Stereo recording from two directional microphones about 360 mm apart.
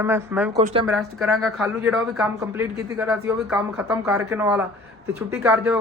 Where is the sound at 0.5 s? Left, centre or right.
Centre.